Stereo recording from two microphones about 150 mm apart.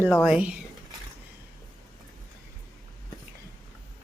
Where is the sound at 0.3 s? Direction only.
5° right (ahead or behind).